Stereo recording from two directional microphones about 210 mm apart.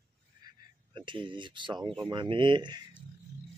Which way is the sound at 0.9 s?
20° right (ahead or behind).